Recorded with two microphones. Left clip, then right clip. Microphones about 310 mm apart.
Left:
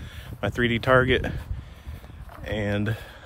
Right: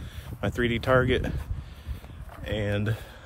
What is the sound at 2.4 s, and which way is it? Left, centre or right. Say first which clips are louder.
Speech: left 2 dB; centre.